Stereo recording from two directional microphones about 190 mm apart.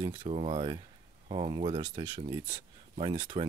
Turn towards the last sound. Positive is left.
turn(degrees=-25)  # may be behind; listen again after turning